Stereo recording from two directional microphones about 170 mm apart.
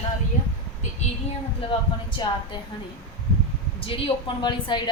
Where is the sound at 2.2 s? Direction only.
25° left (ahead or behind).